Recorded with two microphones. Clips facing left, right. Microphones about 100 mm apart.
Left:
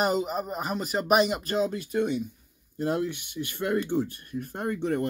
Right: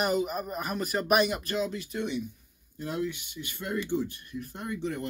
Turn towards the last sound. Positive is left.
turn(degrees=50)  # may be behind; listen again after turning